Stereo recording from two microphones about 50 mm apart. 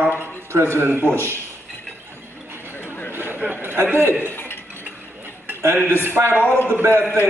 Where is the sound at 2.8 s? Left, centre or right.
Left.